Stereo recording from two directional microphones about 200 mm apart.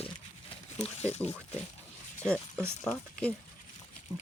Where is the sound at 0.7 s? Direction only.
30° left (ahead or behind).